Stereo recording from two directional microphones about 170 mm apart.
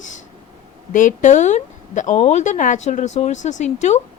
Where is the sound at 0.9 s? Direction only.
50° left (ahead or behind).